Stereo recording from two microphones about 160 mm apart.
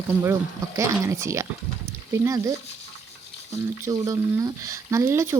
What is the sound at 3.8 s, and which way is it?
Speech, 20° right (ahead or behind).